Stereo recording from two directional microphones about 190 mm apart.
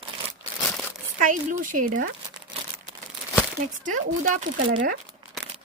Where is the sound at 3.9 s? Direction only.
40° right (ahead or behind).